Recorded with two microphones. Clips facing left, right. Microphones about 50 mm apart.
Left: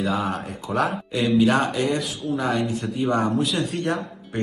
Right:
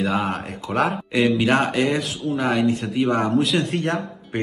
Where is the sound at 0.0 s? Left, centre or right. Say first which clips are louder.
Right 2 dB; right.